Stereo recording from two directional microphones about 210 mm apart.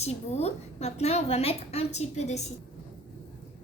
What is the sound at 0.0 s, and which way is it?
A woman's voice, 30° left (ahead or behind).